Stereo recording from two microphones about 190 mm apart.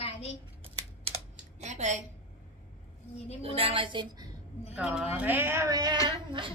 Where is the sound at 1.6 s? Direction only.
35° right (ahead or behind).